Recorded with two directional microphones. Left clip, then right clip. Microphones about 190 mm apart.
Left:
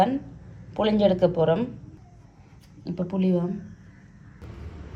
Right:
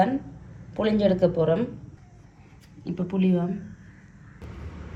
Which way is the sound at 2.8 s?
5° left (ahead or behind).